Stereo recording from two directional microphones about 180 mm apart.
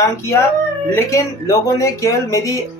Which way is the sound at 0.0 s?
15° left (ahead or behind).